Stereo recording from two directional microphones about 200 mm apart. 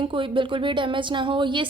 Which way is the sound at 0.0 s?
25° right (ahead or behind).